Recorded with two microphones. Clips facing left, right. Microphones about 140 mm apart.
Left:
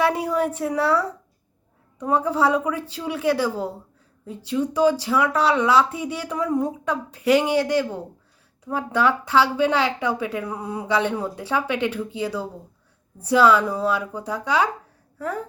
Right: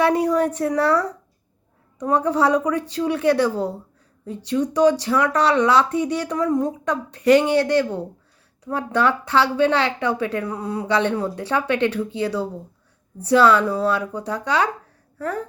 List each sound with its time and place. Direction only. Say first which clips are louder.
0.0 s a woman's voice: right 3 dB; 5° left (ahead or behind)